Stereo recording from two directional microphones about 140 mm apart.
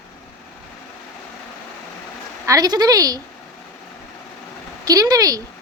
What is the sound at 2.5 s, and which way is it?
Speech, 25° right (ahead or behind).